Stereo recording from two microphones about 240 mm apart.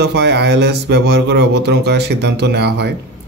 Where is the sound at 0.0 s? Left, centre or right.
Right.